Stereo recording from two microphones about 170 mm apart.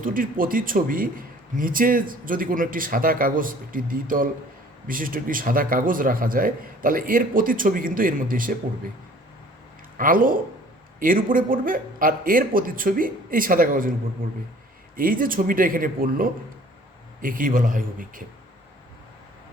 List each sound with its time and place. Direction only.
0.0 s a man's voice: 55° right (ahead or behind)
10.0 s a man's voice: 55° right (ahead or behind)
14.9 s a man's voice: 55° right (ahead or behind)